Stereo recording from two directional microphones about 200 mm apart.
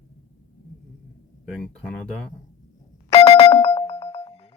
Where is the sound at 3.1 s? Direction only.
30° left (ahead or behind).